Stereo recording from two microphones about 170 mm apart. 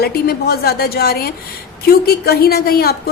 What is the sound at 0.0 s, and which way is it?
A woman's voice, 65° left (ahead or behind).